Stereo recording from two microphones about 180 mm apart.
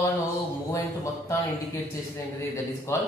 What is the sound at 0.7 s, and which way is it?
Speech, 15° left (ahead or behind).